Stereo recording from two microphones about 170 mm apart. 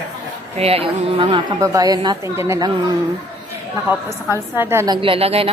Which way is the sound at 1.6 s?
20° right (ahead or behind).